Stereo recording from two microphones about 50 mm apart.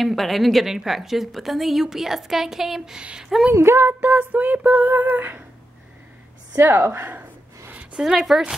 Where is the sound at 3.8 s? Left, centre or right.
Right.